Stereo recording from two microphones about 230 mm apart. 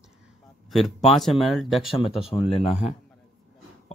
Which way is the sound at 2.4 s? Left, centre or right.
Left.